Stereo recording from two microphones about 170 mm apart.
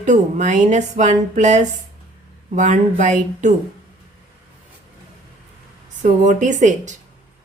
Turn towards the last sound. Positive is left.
turn(degrees=-45)  # may be behind; listen again after turning